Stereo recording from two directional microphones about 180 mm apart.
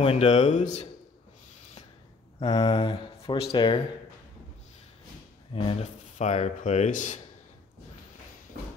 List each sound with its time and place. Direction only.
0.0 s speech: 35° left (ahead or behind)
2.4 s speech: 35° left (ahead or behind)
5.5 s speech: 35° left (ahead or behind)